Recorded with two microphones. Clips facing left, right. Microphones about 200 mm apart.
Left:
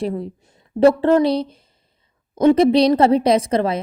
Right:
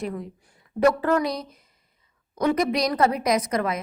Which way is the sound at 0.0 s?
30° left (ahead or behind).